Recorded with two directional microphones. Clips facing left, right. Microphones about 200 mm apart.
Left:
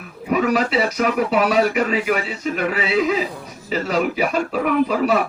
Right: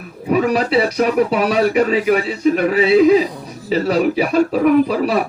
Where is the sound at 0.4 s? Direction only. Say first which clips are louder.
Right 1 dB; 35° right (ahead or behind).